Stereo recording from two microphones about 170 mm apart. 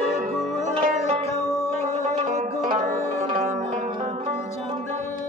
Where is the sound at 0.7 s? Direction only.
35° right (ahead or behind).